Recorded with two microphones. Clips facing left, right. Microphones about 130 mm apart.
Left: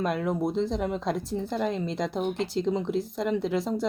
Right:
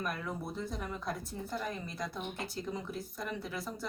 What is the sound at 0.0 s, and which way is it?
Speech, 85° left.